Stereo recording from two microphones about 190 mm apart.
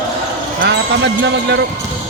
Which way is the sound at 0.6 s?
65° right (ahead or behind).